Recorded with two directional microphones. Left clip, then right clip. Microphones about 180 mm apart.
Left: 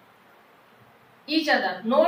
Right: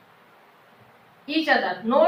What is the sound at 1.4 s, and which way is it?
Speech, 15° left (ahead or behind).